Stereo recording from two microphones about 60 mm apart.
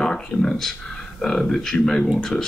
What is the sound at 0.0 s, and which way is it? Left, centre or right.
Speech, centre.